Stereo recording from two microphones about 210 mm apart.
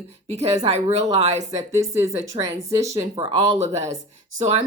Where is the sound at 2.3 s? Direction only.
15° right (ahead or behind).